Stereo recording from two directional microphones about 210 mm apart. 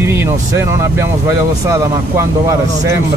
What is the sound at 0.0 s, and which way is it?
Speech, 10° right (ahead or behind).